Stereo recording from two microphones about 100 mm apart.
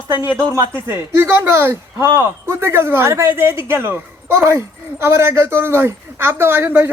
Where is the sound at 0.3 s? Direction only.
30° right (ahead or behind).